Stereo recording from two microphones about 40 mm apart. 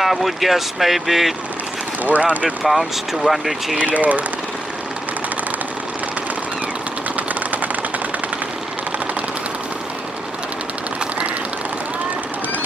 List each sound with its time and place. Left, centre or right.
0.0 s speech: centre
2.0 s speech: right
2.6 s speech: centre
3.7 s speech: right
7.2 s sewing machine: right